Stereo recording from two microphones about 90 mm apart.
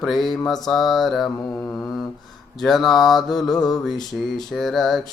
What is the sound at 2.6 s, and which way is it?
Mantra, centre (ahead or behind).